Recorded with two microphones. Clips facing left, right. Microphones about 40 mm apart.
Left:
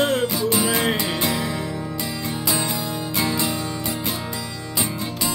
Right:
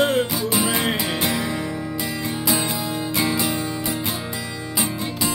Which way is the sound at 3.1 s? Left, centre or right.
Centre.